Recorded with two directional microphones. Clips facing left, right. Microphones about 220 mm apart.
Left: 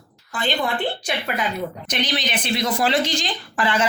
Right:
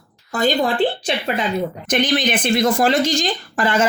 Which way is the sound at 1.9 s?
50° right (ahead or behind).